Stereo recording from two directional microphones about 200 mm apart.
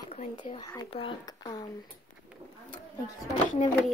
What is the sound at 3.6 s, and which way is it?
Speech, 35° left (ahead or behind).